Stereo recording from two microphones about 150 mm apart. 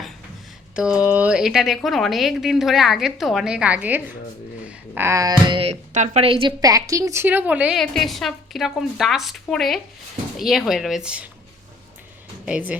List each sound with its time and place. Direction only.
0.8 s a woman's voice: 5° right (ahead or behind)
5.5 s speech: 35° right (ahead or behind)
5.9 s a woman's voice: 55° right (ahead or behind)
6.2 s speech: 35° right (ahead or behind)
6.6 s a woman's voice: 25° right (ahead or behind); by 11.3 s 5° right (ahead or behind)
12.5 s a woman's voice: 10° right (ahead or behind)